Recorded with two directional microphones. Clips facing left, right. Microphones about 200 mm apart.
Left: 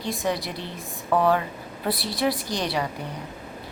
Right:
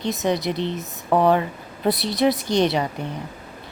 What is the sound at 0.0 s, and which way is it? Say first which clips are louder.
Speech: right 5 dB; 20° right (ahead or behind).